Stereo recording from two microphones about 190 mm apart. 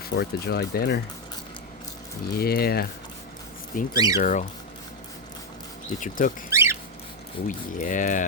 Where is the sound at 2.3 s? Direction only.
55° left (ahead or behind).